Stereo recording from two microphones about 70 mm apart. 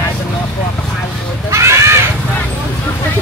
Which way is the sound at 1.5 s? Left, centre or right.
Right.